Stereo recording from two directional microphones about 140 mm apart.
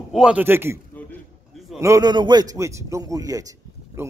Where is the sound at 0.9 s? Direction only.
10° left (ahead or behind).